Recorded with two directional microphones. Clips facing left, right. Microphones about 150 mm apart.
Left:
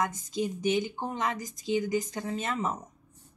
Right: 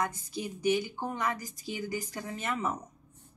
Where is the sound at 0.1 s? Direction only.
20° left (ahead or behind).